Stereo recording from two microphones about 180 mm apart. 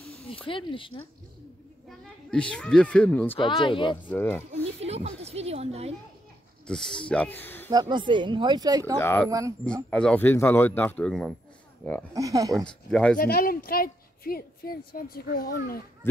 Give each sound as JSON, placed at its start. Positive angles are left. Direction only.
{"t": 0.5, "sound": "speech", "side_deg": 30}
{"t": 1.9, "sound": "speech", "side_deg": 5}
{"t": 3.3, "sound": "speech", "side_deg": 25}
{"t": 4.1, "sound": "speech", "side_deg": 10}
{"t": 4.8, "sound": "speech", "side_deg": -35}
{"t": 6.7, "sound": "speech", "side_deg": 5}
{"t": 7.7, "sound": "speech", "side_deg": -25}
{"t": 9.0, "sound": "speech", "side_deg": 10}
{"t": 12.1, "sound": "speech", "side_deg": -20}
{"t": 12.6, "sound": "speech", "side_deg": 5}
{"t": 13.2, "sound": "a woman's voice", "side_deg": 55}